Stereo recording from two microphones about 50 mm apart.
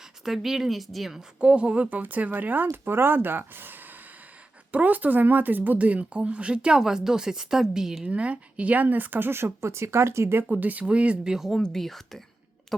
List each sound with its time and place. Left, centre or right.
0.3 s a woman's voice: centre
1.4 s speech: right
2.8 s speech: right
4.7 s speech: right; by 8.0 s centre
8.0 s speech: right
10.5 s speech: right
11.2 s speech: centre
11.6 s speech: centre